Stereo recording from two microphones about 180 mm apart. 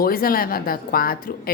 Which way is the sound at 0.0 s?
55° left (ahead or behind).